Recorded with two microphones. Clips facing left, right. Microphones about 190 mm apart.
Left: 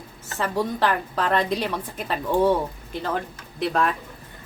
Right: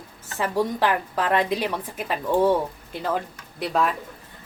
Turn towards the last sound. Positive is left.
turn(degrees=-5)  # may be behind; listen again after turning